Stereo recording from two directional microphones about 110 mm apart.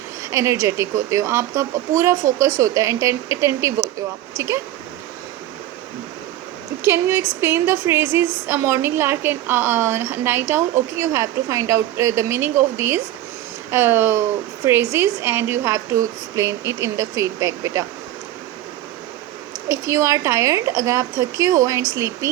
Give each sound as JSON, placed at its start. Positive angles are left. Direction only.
{"t": 0.3, "sound": "a woman's voice", "side_deg": -25}
{"t": 6.8, "sound": "a woman's voice", "side_deg": -25}
{"t": 19.6, "sound": "a woman's voice", "side_deg": -30}